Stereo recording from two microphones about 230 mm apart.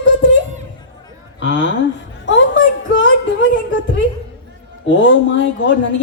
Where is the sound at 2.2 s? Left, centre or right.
Left.